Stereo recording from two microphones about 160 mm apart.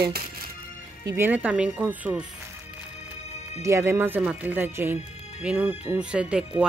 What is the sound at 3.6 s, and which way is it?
Speech, 15° right (ahead or behind).